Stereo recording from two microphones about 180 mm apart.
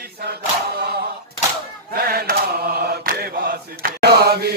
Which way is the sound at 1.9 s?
60° right (ahead or behind).